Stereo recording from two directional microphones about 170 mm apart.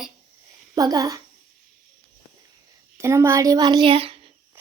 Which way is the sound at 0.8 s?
20° right (ahead or behind).